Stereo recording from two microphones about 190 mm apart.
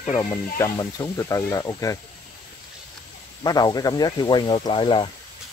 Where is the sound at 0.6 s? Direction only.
20° left (ahead or behind).